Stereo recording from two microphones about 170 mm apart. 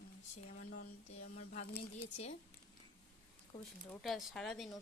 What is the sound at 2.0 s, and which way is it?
Speech, 40° left (ahead or behind).